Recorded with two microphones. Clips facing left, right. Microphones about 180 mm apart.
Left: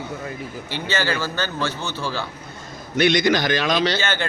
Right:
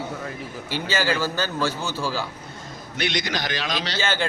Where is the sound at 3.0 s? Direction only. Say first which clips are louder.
Left 9 dB; 50° left (ahead or behind).